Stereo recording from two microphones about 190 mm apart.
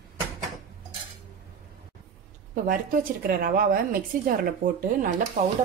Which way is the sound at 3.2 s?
50° right (ahead or behind).